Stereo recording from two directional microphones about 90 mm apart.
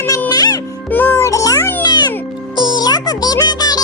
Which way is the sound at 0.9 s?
20° left (ahead or behind).